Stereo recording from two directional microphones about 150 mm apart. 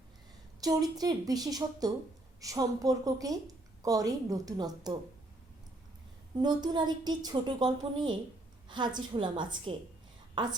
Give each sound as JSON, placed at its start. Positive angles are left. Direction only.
{"t": 0.6, "sound": "a woman's voice", "side_deg": -25}
{"t": 6.4, "sound": "a woman's voice", "side_deg": -30}